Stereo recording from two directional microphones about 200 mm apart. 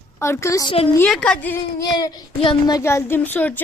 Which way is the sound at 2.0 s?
25° left (ahead or behind).